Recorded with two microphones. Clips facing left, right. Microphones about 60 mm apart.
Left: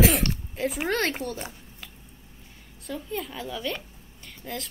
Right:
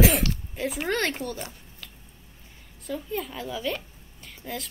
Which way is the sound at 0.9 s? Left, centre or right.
Centre.